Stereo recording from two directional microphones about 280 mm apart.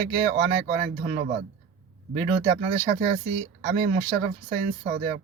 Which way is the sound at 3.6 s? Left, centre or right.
Right.